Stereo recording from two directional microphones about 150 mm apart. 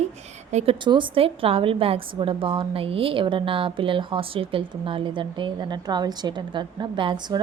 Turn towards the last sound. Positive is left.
turn(degrees=-35)  # may be behind; listen again after turning